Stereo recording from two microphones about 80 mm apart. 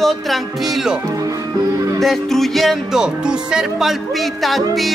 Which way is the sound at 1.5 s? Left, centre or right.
Right.